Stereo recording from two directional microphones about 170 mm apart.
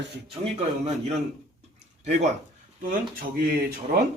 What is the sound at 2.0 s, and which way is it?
Speech, 40° right (ahead or behind).